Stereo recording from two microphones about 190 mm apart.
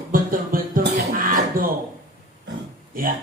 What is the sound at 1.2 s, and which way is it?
Beatboxing, 45° right (ahead or behind).